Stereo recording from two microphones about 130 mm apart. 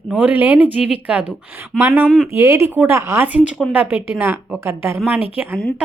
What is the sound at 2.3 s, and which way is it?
A woman's voice, 20° right (ahead or behind).